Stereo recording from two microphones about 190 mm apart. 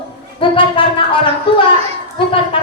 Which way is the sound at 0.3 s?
25° left (ahead or behind).